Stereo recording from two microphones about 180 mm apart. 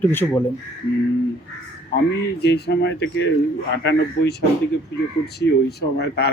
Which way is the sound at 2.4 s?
65° left (ahead or behind).